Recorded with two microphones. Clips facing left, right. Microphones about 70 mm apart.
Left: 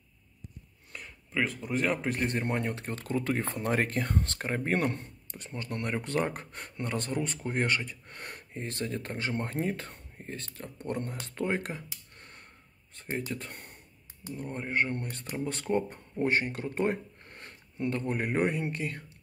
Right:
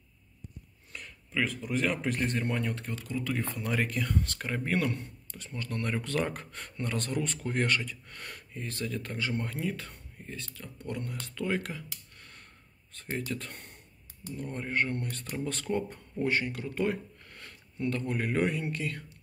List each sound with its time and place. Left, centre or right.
0.9 s a sound: centre
1.8 s speech: centre
2.3 s speech: left